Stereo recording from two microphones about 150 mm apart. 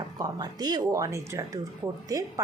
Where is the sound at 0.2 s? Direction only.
25° right (ahead or behind).